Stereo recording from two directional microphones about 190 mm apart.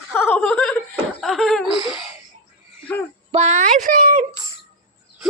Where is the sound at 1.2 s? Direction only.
Centre (ahead or behind).